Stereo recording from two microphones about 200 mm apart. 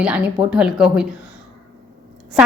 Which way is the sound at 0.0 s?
5° right (ahead or behind).